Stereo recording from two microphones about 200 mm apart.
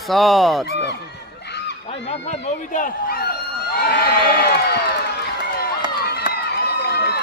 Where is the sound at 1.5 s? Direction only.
60° left (ahead or behind).